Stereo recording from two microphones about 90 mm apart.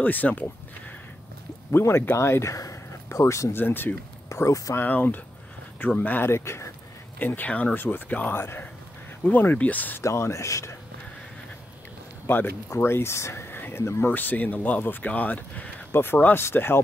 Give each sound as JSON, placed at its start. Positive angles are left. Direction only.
{"t": 0.0, "sound": "speech", "side_deg": 20}
{"t": 1.7, "sound": "speech", "side_deg": 30}
{"t": 3.5, "sound": "speech", "side_deg": 25}
{"t": 4.3, "sound": "speech", "side_deg": 35}
{"t": 4.7, "sound": "speech", "side_deg": 20}
{"t": 7.2, "sound": "speech", "side_deg": 20}
{"t": 10.0, "sound": "speech", "side_deg": 30}
{"t": 12.3, "sound": "speech", "side_deg": 25}